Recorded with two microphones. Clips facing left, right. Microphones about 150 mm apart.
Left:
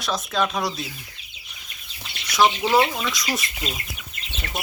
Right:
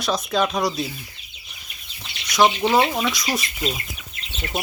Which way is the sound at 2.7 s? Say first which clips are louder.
Right 1 dB; 20° right (ahead or behind).